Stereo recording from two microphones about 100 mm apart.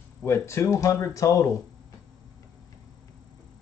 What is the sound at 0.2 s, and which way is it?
Speech, 25° left (ahead or behind).